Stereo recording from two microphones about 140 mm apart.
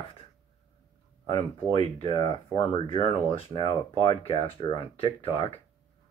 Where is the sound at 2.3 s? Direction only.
40° left (ahead or behind).